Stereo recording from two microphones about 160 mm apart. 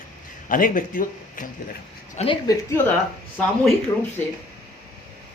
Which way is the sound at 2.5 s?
15° left (ahead or behind).